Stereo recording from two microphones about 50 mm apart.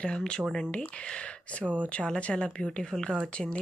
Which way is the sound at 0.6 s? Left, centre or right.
Left.